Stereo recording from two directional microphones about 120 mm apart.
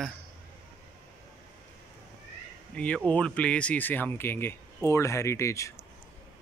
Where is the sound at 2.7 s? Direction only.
10° left (ahead or behind).